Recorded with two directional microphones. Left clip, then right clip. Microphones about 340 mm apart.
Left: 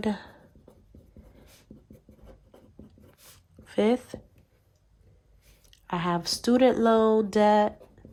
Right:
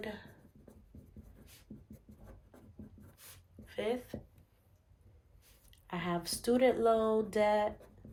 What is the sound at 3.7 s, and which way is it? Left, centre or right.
Speech, centre.